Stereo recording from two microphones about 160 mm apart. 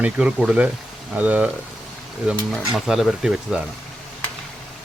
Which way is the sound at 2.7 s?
Centre (ahead or behind).